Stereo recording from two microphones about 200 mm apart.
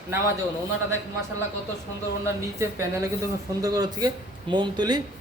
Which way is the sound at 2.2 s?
15° right (ahead or behind).